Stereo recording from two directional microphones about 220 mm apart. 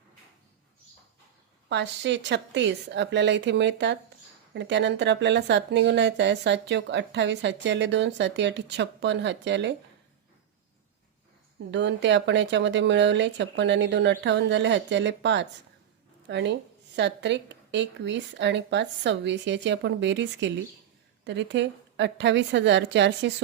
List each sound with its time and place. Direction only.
1.7 s speech: 50° right (ahead or behind)
11.7 s speech: 55° right (ahead or behind)